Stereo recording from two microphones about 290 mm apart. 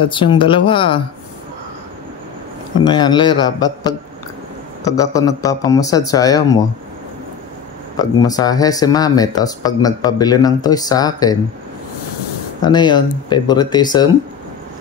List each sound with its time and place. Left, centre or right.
0.0 s speech: centre
2.8 s speech: centre
8.0 s speech: centre
12.6 s speech: centre